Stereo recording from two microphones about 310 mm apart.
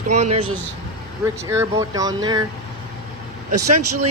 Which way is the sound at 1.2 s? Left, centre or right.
Centre.